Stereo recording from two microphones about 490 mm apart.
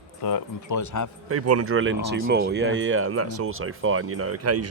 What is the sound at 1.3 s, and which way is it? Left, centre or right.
Speech, right.